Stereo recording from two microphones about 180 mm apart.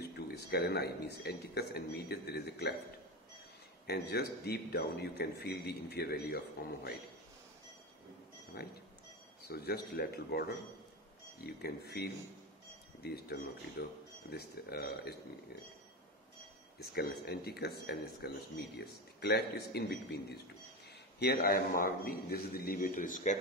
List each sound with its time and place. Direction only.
0.0 s speech: 65° left (ahead or behind)
3.8 s speech: 65° left (ahead or behind)
8.5 s speech: 55° left (ahead or behind)
11.4 s speech: 60° left (ahead or behind)
16.7 s a man's voice: 60° left (ahead or behind)